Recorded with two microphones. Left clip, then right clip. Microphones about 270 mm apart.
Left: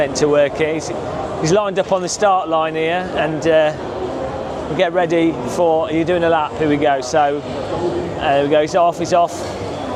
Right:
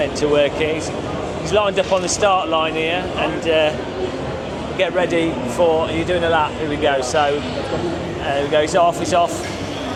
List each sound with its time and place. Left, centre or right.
0.0 s speech: left
4.8 s speech: left
5.8 s speech: left
8.3 s speech: left